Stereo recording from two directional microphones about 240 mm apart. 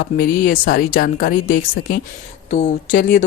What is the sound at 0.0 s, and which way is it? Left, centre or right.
Speech, left.